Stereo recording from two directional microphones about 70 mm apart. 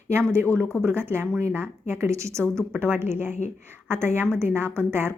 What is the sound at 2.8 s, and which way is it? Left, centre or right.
A woman's voice, right.